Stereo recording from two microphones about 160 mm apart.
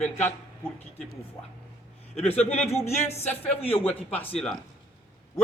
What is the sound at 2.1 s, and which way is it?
Speech, 40° left (ahead or behind).